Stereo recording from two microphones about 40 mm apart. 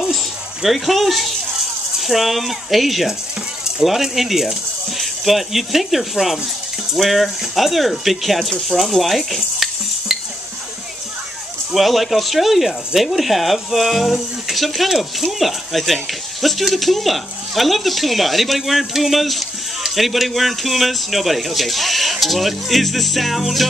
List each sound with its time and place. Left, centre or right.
0.1 s a sound: centre
2.0 s speech: centre
11.7 s speech: centre